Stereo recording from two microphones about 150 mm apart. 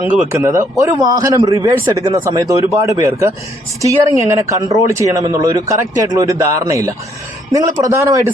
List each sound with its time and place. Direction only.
0.3 s a man's voice: 20° right (ahead or behind)